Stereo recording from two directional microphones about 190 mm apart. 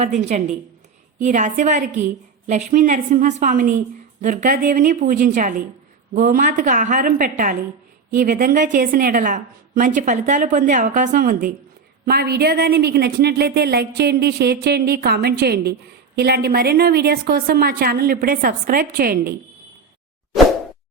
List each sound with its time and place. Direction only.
0.0 s a woman's voice: 35° right (ahead or behind); by 19.3 s 50° right (ahead or behind)